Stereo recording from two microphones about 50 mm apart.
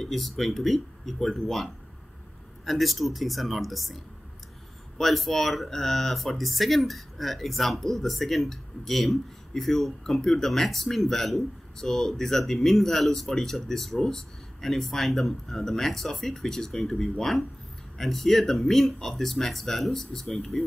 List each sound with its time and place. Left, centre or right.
0.0 s speech: centre